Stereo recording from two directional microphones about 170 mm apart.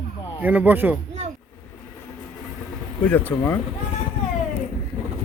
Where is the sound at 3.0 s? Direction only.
10° left (ahead or behind).